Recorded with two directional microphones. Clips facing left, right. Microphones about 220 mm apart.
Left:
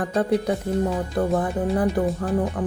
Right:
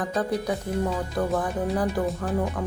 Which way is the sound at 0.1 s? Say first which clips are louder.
Left 4 dB; 30° left (ahead or behind).